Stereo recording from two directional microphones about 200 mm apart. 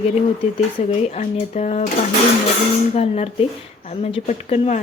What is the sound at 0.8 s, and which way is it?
Speech, 30° left (ahead or behind).